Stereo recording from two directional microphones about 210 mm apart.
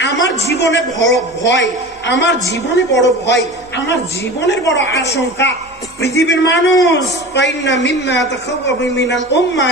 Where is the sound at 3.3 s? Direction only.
55° left (ahead or behind).